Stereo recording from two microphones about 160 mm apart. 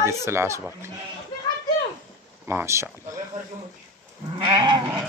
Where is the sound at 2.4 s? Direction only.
15° right (ahead or behind).